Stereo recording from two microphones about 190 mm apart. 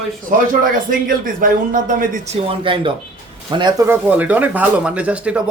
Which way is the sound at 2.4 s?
30° right (ahead or behind).